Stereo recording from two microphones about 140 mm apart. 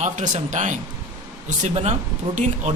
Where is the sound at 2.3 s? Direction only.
40° right (ahead or behind).